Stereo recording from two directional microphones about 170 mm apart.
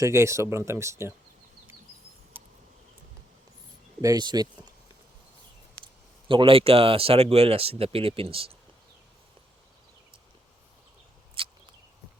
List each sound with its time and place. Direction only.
0.0 s speech: 15° right (ahead or behind)
2.3 s insect: 10° right (ahead or behind)
4.0 s speech: 25° right (ahead or behind)
5.8 s speech: 30° right (ahead or behind)
11.4 s a sound: 30° right (ahead or behind)